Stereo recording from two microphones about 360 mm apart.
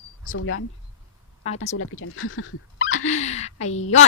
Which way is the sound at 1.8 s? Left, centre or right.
Left.